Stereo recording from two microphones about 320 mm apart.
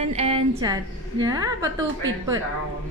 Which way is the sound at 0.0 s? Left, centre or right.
Centre.